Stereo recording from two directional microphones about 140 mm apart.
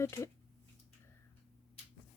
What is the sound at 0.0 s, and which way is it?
Speech, 20° left (ahead or behind).